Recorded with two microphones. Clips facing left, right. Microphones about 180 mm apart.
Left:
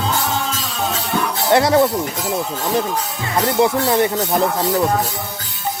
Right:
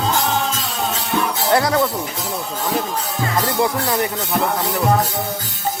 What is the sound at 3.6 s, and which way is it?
Speech, 25° left (ahead or behind).